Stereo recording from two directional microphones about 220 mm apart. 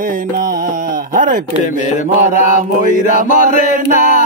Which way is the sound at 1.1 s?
35° right (ahead or behind).